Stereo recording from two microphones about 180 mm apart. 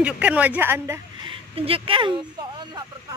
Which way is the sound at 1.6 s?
30° right (ahead or behind).